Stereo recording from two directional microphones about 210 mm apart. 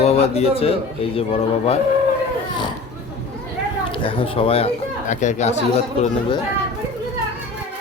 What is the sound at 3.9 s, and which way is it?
A man's voice, 25° left (ahead or behind).